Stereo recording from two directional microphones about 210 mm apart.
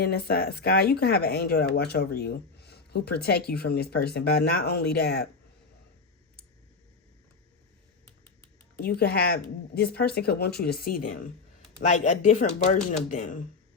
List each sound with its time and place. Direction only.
0.0 s speech: 50° left (ahead or behind)
8.8 s speech: 50° left (ahead or behind)